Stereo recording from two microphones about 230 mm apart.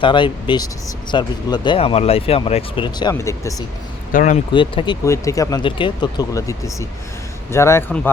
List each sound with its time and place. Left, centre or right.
0.0 s speech: left
4.1 s speech: left
4.5 s speech: left